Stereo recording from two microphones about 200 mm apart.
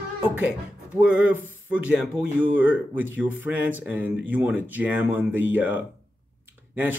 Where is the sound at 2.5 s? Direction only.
10° right (ahead or behind).